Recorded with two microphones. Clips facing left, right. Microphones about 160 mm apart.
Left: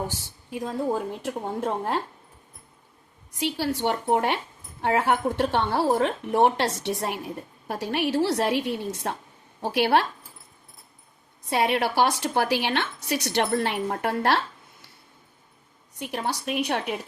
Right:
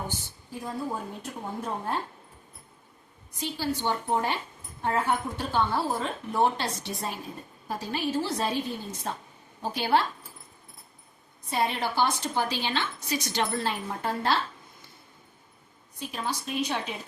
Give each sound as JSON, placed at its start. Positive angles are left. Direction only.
{"t": 0.1, "sound": "a woman's voice", "side_deg": 90}
{"t": 3.4, "sound": "a woman's voice", "side_deg": 80}
{"t": 4.8, "sound": "a woman's voice", "side_deg": 80}
{"t": 11.4, "sound": "a woman's voice", "side_deg": 75}
{"t": 16.0, "sound": "a woman's voice", "side_deg": 70}